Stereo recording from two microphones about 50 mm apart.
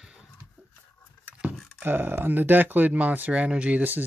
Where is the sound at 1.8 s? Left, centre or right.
Right.